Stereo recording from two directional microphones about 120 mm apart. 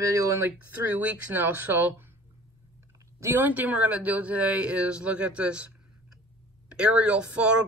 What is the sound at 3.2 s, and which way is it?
Speech, 15° right (ahead or behind).